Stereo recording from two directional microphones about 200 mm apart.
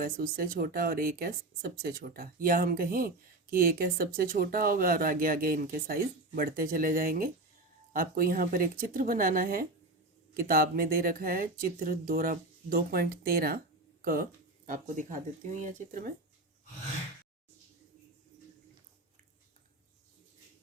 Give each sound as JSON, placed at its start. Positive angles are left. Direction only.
{"t": 0.0, "sound": "speech", "side_deg": -45}